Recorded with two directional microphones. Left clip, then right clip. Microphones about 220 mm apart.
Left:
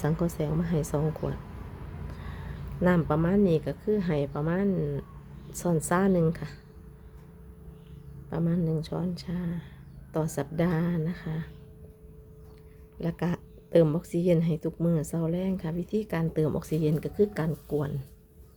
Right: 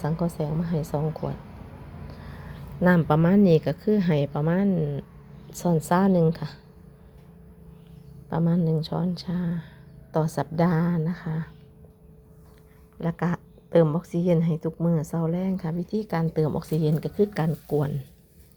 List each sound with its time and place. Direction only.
0.0 s a woman's voice: 10° left (ahead or behind)
2.8 s a woman's voice: 10° right (ahead or behind)
8.3 s a woman's voice: 10° right (ahead or behind)
13.0 s a woman's voice: centre (ahead or behind)